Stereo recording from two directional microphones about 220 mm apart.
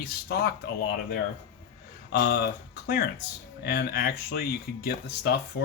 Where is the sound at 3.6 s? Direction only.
45° left (ahead or behind).